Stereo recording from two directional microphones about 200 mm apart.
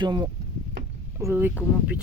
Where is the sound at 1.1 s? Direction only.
10° right (ahead or behind).